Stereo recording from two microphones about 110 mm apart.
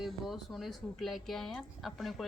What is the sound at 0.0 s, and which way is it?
A woman's voice, centre (ahead or behind).